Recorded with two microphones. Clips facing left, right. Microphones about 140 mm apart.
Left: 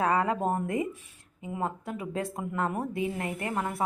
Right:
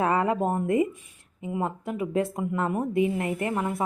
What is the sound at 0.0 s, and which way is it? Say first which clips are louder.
A woman's voice: right 2 dB; 25° right (ahead or behind).